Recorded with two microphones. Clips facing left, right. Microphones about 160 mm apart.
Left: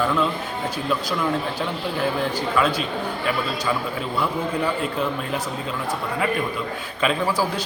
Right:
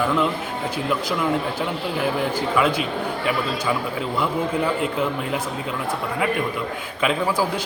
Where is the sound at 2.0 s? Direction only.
15° right (ahead or behind).